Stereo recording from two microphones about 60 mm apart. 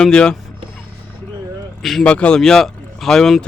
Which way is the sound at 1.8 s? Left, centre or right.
Centre.